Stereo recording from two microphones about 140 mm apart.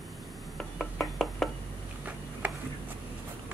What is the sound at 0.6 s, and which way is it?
Chopping, 5° left (ahead or behind).